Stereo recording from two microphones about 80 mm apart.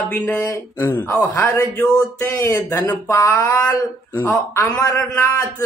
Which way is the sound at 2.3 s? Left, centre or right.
Left.